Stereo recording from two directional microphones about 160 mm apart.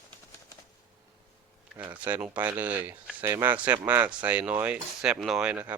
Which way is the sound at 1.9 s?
10° right (ahead or behind).